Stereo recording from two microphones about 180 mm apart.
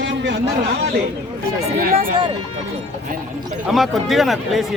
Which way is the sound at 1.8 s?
50° right (ahead or behind).